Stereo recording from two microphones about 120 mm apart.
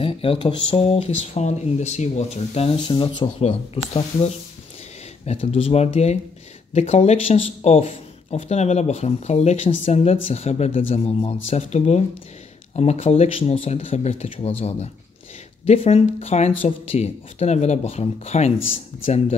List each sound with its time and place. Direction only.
0.0 s speech: 50° left (ahead or behind)
3.4 s speech: 55° left (ahead or behind)
7.3 s speech: 50° left (ahead or behind)